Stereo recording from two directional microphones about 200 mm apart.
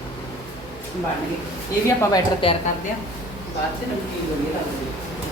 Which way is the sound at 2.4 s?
25° left (ahead or behind).